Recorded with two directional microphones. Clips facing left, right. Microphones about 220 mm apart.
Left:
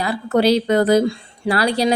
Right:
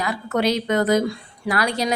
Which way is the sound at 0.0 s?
30° left (ahead or behind).